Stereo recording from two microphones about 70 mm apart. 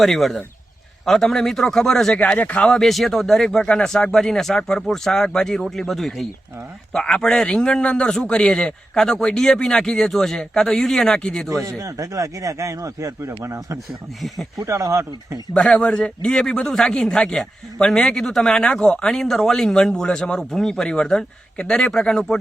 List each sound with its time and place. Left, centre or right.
0.0 s speech: centre
2.1 s a man's voice: centre
2.6 s a man's voice: centre
11.8 s speech: right
15.5 s a man's voice: centre